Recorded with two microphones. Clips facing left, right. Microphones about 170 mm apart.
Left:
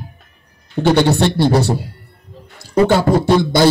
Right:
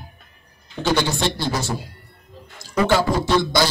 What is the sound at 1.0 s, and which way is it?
Speech, 65° left (ahead or behind).